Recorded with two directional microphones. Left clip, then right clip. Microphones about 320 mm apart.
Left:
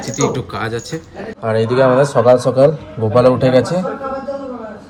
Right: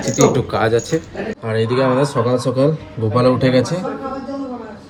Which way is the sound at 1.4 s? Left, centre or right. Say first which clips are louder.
Left 5 dB; centre.